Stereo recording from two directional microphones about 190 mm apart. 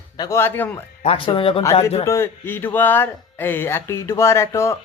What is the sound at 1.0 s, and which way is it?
Speech, 30° left (ahead or behind).